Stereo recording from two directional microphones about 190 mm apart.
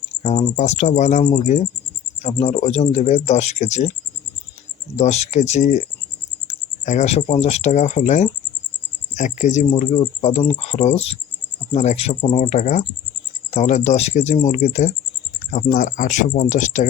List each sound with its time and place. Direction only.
0.2 s speech: 35° left (ahead or behind)
4.9 s speech: 35° left (ahead or behind)